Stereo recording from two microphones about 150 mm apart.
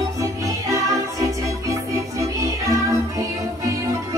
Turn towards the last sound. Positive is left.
turn(degrees=-20)  # may be behind; listen again after turning